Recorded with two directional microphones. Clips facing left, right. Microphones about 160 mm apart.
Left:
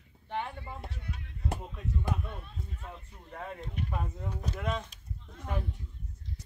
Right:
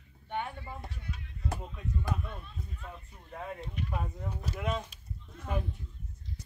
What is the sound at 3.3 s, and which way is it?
Speech, 5° right (ahead or behind).